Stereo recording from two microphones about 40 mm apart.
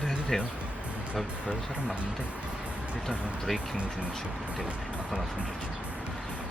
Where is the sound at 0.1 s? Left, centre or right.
Centre.